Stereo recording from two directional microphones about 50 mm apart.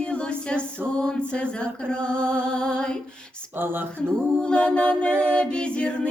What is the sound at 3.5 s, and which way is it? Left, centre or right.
Speech, right.